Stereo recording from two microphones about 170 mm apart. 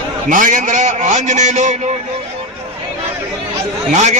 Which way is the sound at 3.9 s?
45° right (ahead or behind).